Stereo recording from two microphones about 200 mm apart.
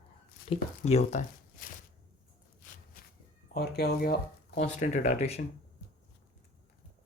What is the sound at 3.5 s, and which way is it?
Speech, 50° left (ahead or behind).